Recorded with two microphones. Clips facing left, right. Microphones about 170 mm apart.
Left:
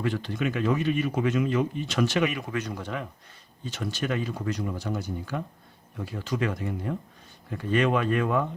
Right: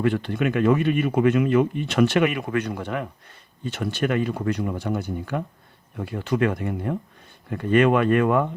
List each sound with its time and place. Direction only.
0.0 s speech: 60° right (ahead or behind)